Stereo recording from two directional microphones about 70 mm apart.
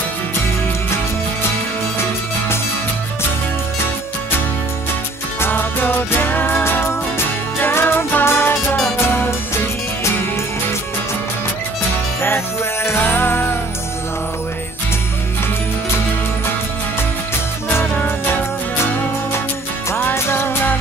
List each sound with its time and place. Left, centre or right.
5.4 s music: left
12.8 s music: left
20.0 s music: left